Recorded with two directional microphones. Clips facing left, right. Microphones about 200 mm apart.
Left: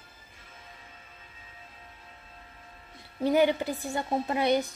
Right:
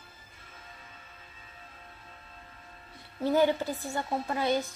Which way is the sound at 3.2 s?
15° left (ahead or behind).